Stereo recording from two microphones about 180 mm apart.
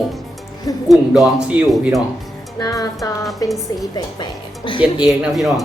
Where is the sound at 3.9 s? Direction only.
25° left (ahead or behind).